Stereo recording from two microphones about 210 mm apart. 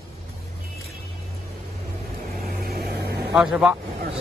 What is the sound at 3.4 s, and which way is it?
Speech, 5° right (ahead or behind).